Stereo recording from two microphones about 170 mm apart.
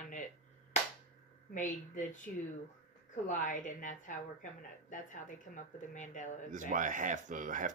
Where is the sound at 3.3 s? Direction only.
45° left (ahead or behind).